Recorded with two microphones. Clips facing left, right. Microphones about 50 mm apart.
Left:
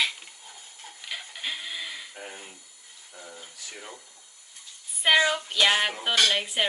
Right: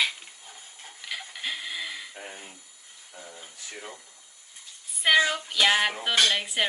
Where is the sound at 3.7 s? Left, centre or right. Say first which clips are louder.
Right 2 dB; centre.